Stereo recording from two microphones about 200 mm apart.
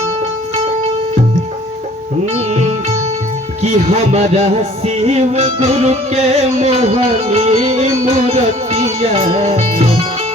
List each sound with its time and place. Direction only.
3.6 s music: 35° right (ahead or behind)